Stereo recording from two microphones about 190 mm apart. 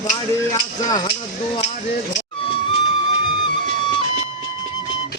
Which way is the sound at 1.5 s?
35° left (ahead or behind).